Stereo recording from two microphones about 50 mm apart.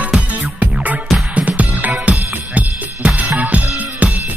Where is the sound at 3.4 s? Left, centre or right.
Right.